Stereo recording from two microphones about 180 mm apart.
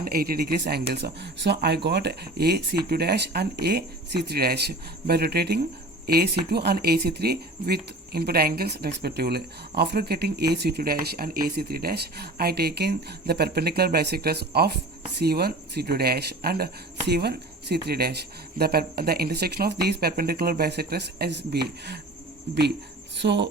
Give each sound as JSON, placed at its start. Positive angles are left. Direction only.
{"t": 0.0, "sound": "speech", "side_deg": -55}
{"t": 23.1, "sound": "speech", "side_deg": -75}